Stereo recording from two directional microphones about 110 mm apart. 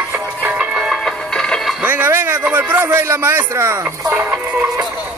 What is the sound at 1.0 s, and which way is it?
Music, 5° left (ahead or behind).